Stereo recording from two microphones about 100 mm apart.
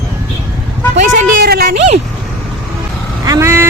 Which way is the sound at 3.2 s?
30° right (ahead or behind).